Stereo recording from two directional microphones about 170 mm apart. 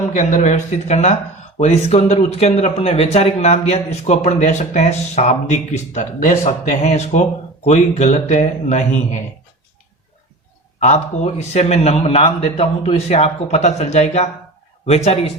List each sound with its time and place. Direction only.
0.1 s speech: 50° left (ahead or behind)
10.8 s speech: 40° left (ahead or behind)